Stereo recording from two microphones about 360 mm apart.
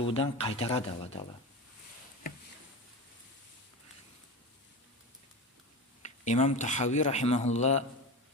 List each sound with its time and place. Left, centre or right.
0.0 s speech: centre
6.0 s a man's voice: centre